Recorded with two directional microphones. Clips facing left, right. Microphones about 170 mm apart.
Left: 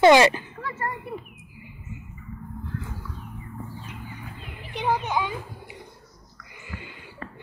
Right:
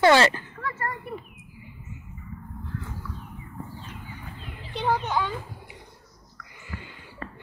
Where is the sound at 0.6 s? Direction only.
25° left (ahead or behind).